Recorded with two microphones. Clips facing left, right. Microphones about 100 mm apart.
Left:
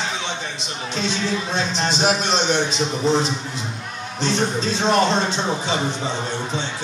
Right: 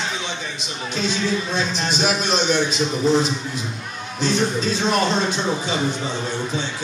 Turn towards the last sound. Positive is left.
turn(degrees=25)  # may be behind; listen again after turning